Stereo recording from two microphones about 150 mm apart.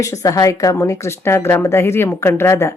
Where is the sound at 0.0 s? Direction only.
20° left (ahead or behind).